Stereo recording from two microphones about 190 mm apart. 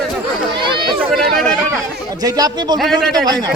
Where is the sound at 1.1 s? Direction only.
Centre (ahead or behind).